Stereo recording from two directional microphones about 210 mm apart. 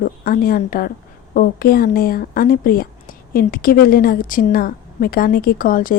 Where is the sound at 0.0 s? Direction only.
45° left (ahead or behind).